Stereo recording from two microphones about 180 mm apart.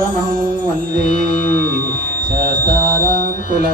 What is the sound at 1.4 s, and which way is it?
Music, 10° left (ahead or behind).